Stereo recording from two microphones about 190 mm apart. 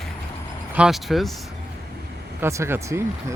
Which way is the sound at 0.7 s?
5° right (ahead or behind).